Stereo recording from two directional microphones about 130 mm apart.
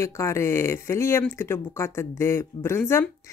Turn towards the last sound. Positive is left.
turn(degrees=20)  # may be behind; listen again after turning